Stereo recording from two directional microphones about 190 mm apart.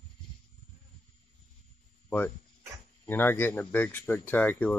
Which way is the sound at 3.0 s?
10° left (ahead or behind).